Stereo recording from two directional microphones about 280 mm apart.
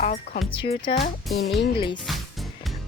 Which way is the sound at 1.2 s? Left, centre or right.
Centre.